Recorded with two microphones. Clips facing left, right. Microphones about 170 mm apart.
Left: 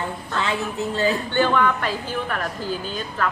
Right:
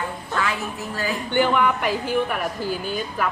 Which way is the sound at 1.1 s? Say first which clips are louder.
Even; 15° right (ahead or behind).